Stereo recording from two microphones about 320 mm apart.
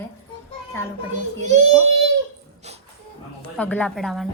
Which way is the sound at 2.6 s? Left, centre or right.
Centre.